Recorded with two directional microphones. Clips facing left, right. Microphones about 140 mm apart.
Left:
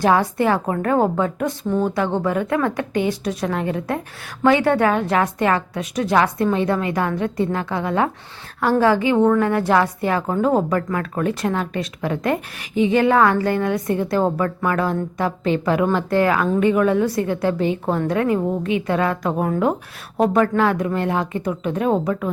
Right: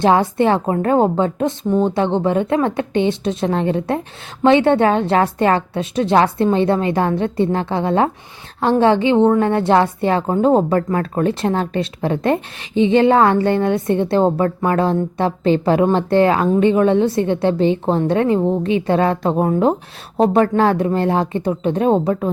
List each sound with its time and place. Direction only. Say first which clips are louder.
0.0 s a woman's voice: right 3 dB; 25° right (ahead or behind)